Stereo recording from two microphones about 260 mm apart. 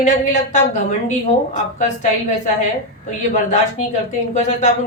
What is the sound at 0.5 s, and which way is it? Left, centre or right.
Speech, left.